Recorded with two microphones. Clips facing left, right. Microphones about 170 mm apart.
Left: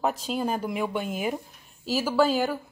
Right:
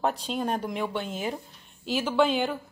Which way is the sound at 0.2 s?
Centre (ahead or behind).